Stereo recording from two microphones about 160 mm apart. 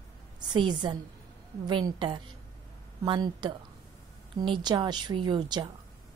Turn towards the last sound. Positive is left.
turn(degrees=-25)  # may be behind; listen again after turning